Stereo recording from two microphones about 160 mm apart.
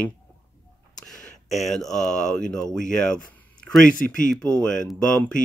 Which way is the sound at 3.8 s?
55° left (ahead or behind).